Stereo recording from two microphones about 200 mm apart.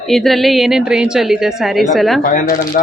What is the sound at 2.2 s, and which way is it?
Speech, 45° left (ahead or behind).